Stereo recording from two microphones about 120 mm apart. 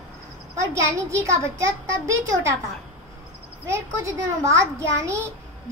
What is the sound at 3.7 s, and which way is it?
A child's voice, 25° right (ahead or behind).